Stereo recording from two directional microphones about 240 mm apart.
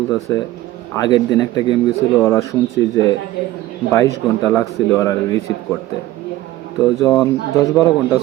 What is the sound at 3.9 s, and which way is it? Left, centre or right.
A man's voice, centre.